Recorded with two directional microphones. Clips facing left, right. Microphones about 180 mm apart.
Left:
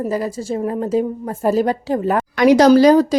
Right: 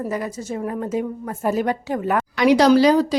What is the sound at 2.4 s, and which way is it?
Speech, 45° left (ahead or behind).